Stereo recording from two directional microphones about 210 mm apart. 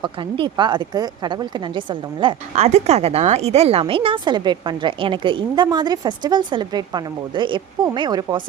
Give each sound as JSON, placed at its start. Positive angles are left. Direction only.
{"t": 0.0, "sound": "a woman's voice", "side_deg": -25}